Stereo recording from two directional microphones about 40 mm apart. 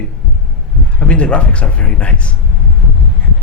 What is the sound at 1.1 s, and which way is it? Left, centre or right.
Speech, left.